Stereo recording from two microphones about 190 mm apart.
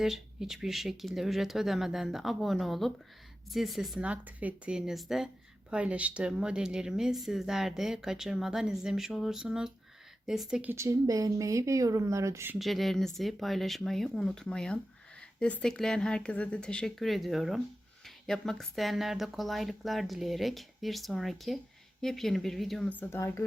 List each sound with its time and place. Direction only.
0.0 s a woman's voice: centre (ahead or behind)
12.5 s speech: centre (ahead or behind)